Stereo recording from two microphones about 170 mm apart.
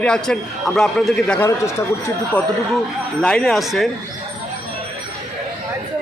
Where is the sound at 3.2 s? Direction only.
5° left (ahead or behind).